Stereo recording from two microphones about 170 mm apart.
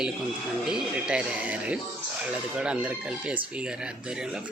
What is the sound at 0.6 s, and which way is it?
Speech, 5° right (ahead or behind).